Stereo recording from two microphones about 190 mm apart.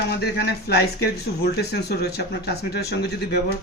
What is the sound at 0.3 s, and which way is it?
Speech, 60° left (ahead or behind).